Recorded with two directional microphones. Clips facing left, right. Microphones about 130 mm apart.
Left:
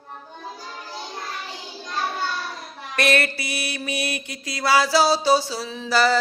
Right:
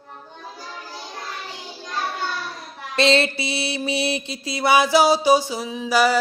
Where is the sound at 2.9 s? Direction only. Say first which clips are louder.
Right 3 dB; 25° right (ahead or behind).